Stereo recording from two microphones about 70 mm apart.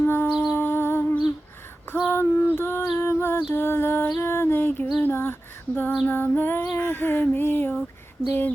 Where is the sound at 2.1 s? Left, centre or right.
Left.